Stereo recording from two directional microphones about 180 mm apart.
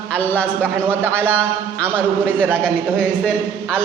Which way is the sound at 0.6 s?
10° right (ahead or behind).